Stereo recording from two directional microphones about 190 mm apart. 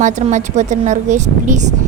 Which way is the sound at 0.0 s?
40° right (ahead or behind).